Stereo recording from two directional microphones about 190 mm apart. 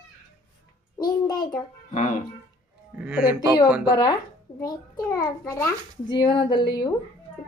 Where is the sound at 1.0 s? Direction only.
20° left (ahead or behind).